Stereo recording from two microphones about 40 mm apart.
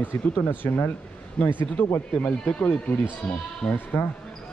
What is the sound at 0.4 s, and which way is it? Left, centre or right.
Speech, left.